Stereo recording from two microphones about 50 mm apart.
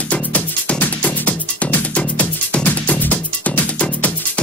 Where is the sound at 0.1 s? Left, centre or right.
Left.